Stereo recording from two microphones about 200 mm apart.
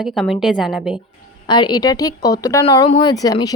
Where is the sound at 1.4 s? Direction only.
20° left (ahead or behind).